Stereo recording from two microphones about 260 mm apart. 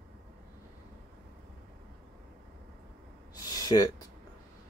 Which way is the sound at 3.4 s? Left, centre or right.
Centre.